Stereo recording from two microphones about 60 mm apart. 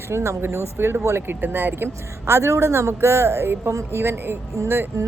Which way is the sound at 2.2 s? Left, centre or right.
Right.